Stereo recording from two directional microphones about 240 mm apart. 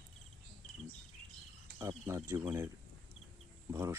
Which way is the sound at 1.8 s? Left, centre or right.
Centre.